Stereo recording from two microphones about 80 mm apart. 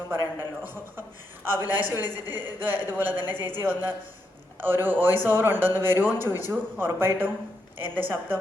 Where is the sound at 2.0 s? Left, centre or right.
Left.